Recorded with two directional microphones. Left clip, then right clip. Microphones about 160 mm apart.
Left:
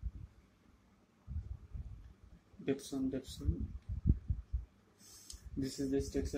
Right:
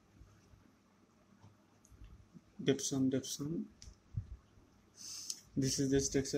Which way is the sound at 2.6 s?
60° right (ahead or behind).